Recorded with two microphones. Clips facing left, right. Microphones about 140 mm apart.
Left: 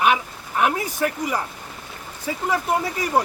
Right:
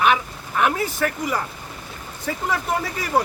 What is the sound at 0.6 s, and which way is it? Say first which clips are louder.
A man's voice: even; 15° left (ahead or behind).